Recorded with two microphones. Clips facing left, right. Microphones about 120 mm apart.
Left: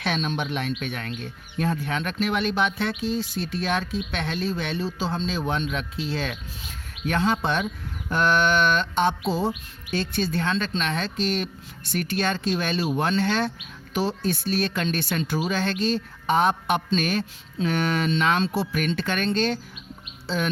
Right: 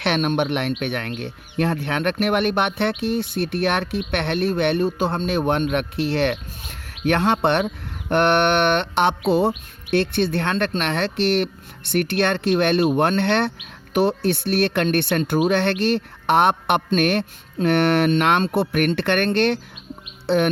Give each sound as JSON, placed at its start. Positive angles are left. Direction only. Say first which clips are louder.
{"t": 0.0, "sound": "speech", "louder": "right 6 dB", "side_deg": -65}
{"t": 20.2, "sound": "bird", "louder": "right 8 dB", "side_deg": -60}